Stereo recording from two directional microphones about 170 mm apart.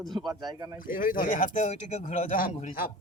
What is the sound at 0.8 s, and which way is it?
Speech, 55° left (ahead or behind).